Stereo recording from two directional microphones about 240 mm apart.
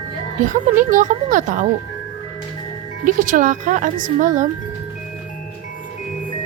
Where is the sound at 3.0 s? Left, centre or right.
Right.